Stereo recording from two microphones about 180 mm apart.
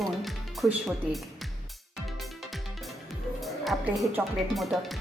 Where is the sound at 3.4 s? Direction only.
Centre (ahead or behind).